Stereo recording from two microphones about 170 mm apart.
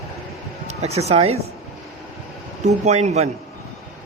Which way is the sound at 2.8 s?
40° right (ahead or behind).